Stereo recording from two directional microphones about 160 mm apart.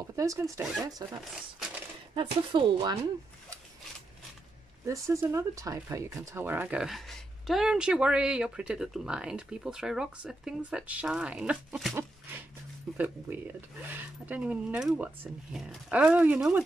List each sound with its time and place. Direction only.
0.1 s speech: 20° right (ahead or behind)
2.1 s speech: 25° right (ahead or behind)
4.8 s speech: 20° right (ahead or behind)